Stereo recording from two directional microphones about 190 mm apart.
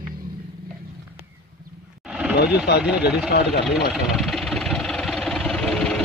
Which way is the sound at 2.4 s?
60° left (ahead or behind).